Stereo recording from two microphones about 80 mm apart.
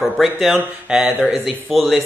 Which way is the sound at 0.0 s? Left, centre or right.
Centre.